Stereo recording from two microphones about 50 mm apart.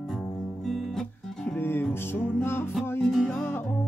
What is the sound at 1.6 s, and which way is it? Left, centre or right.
Music, left.